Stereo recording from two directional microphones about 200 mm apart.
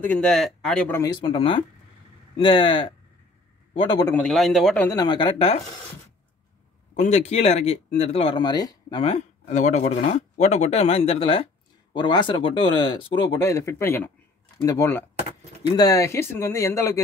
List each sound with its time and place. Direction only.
0.0 s speech: 5° left (ahead or behind)
1.2 s speech: 25° left (ahead or behind)
4.1 s speech: 5° left (ahead or behind)
4.8 s speech: 20° left (ahead or behind)
7.0 s speech: 35° left (ahead or behind); by 17.0 s 15° left (ahead or behind)